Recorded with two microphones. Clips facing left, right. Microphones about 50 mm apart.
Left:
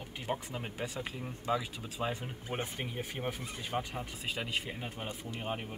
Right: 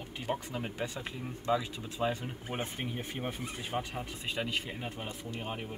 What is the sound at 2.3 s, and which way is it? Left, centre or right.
Speech, centre.